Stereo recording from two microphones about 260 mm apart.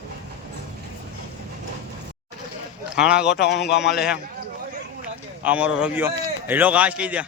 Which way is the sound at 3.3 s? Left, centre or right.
Left.